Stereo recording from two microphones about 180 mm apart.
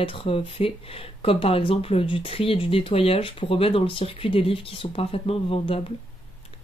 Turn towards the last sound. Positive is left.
turn(degrees=30)  # may be behind; listen again after turning